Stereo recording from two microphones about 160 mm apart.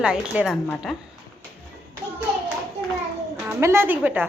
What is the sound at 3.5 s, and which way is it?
Speech, 15° right (ahead or behind).